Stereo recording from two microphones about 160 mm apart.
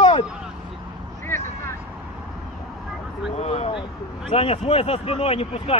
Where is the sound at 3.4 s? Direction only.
40° left (ahead or behind).